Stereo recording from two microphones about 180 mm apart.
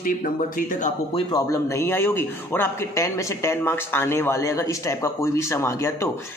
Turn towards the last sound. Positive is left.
turn(degrees=15)  # may be behind; listen again after turning